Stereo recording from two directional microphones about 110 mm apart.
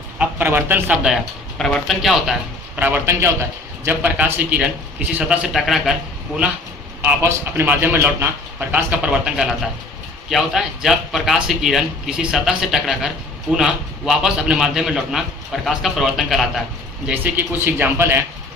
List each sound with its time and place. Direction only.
0.2 s speech: 20° right (ahead or behind)
1.5 s speech: 5° left (ahead or behind)
2.7 s a man's voice: 15° right (ahead or behind)
7.2 s a man's voice: 20° right (ahead or behind); by 16.6 s centre (ahead or behind)
17.1 s speech: 15° right (ahead or behind)